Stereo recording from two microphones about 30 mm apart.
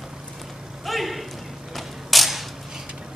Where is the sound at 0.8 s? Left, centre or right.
Centre.